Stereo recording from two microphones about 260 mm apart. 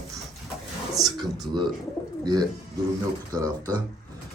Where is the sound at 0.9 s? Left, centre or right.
Centre.